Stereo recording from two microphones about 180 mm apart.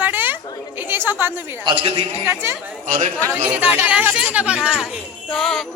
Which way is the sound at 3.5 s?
10° right (ahead or behind).